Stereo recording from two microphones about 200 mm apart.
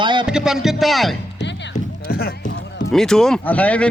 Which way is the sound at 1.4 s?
60° left (ahead or behind).